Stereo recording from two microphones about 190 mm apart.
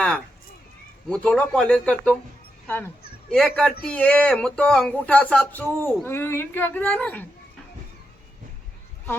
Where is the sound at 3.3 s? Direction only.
Centre (ahead or behind).